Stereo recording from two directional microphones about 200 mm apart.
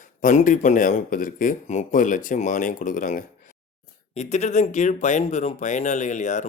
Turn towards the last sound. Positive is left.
turn(degrees=35)  # may be behind; listen again after turning